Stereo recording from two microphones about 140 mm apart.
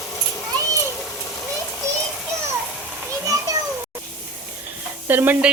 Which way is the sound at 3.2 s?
25° right (ahead or behind).